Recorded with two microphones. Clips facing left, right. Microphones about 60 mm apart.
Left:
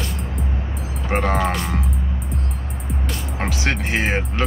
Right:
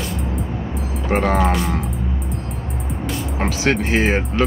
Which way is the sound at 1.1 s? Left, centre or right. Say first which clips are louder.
Right 3 dB; centre.